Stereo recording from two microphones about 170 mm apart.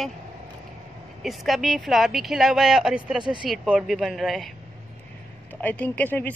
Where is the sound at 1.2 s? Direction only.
Centre (ahead or behind).